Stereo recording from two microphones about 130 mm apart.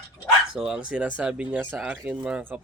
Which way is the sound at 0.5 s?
5° right (ahead or behind).